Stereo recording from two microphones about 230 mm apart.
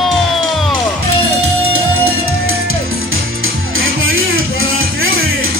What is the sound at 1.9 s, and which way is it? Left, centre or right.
Music, right.